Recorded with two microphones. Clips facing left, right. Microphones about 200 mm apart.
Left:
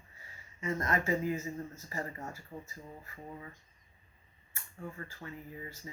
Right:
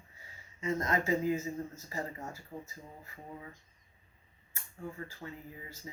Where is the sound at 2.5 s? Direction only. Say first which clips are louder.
Right 1 dB; 10° right (ahead or behind).